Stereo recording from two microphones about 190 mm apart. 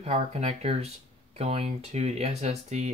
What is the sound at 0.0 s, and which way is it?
Speech, 35° right (ahead or behind).